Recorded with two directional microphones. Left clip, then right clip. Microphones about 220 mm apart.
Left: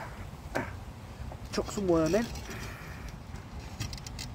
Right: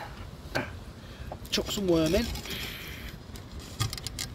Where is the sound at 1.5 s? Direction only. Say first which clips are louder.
Right 2 dB; 35° right (ahead or behind).